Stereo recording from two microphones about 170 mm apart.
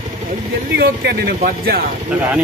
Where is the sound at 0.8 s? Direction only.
75° right (ahead or behind).